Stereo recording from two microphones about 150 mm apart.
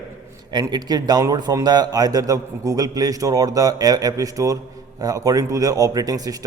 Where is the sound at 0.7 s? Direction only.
25° right (ahead or behind).